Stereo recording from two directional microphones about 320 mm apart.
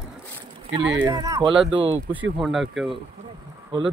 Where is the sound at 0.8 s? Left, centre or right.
Right.